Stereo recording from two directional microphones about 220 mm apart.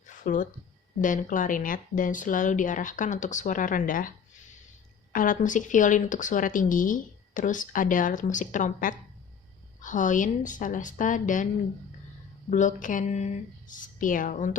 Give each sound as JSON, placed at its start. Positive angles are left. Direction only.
{"t": 0.1, "sound": "a sound", "side_deg": 35}
{"t": 1.0, "sound": "speech", "side_deg": 35}
{"t": 5.1, "sound": "speech", "side_deg": 35}
{"t": 12.5, "sound": "speech", "side_deg": 35}